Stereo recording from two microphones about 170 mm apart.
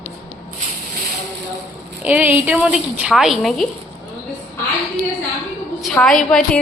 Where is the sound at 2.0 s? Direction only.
10° right (ahead or behind).